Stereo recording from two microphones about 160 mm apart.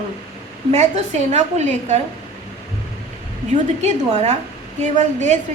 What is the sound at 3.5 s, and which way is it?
A woman's voice, 45° right (ahead or behind).